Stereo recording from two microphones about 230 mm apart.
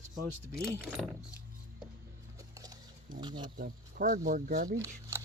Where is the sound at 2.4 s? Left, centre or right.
Centre.